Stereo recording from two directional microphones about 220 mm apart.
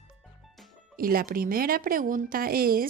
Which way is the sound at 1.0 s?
40° right (ahead or behind).